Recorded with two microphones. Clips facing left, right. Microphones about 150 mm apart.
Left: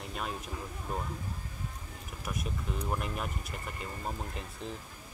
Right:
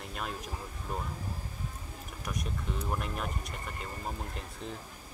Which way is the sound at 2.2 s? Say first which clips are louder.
Even; centre (ahead or behind).